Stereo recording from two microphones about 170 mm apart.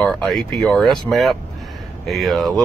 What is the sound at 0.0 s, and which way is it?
Speech, 5° left (ahead or behind).